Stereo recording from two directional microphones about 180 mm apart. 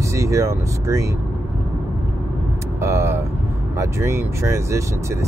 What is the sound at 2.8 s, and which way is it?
Speech, 15° right (ahead or behind).